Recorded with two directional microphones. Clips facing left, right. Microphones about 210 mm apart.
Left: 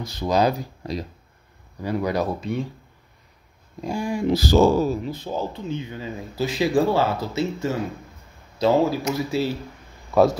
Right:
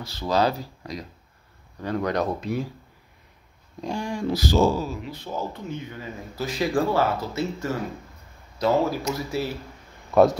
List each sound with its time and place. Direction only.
0.0 s speech: 15° left (ahead or behind)
1.8 s speech: 10° left (ahead or behind)
3.8 s speech: 10° left (ahead or behind)
4.6 s speech: 60° left (ahead or behind)
5.0 s speech: 40° left (ahead or behind); by 9.5 s 25° left (ahead or behind)
10.1 s speech: centre (ahead or behind)